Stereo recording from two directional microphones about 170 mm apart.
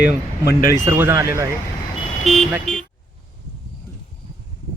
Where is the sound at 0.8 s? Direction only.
15° right (ahead or behind).